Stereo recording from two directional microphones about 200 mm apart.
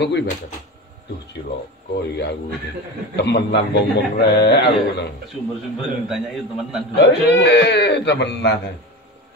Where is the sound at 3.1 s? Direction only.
60° left (ahead or behind).